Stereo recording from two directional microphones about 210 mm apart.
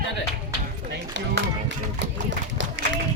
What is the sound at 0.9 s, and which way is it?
Speech, 55° right (ahead or behind).